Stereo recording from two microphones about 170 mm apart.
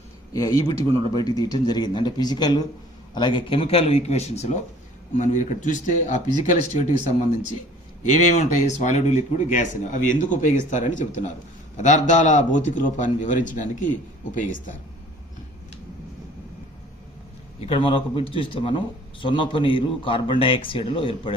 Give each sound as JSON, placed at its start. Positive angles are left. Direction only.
{"t": 0.3, "sound": "a man's voice", "side_deg": 20}
{"t": 8.0, "sound": "speech", "side_deg": 45}
{"t": 17.6, "sound": "a man's voice", "side_deg": 30}